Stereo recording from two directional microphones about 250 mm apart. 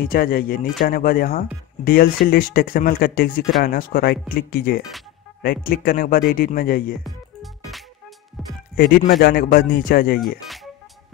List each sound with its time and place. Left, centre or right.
0.0 s speech: left
8.7 s speech: left
10.2 s music: centre